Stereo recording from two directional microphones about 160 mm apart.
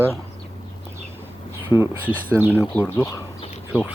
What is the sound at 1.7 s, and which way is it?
Speech, 10° left (ahead or behind).